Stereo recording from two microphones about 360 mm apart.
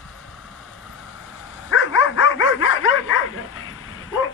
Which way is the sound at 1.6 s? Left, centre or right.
Left.